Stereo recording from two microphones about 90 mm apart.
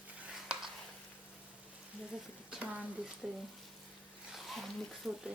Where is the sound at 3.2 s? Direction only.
10° right (ahead or behind).